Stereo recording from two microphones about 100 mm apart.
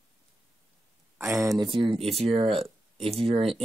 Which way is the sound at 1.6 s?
55° right (ahead or behind).